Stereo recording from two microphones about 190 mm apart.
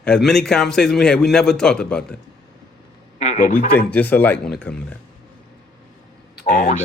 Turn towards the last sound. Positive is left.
turn(degrees=40)  # may be behind; listen again after turning